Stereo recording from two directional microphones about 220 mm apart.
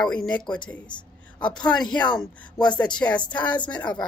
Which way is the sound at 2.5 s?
20° left (ahead or behind).